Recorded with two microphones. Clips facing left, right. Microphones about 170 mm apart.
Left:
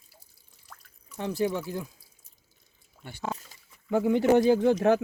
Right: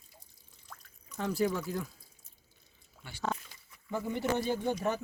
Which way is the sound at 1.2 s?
20° left (ahead or behind).